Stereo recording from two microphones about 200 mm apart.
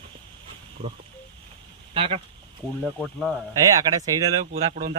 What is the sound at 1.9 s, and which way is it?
Speech, 30° right (ahead or behind).